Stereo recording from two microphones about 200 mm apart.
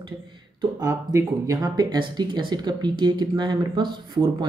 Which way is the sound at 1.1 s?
15° right (ahead or behind).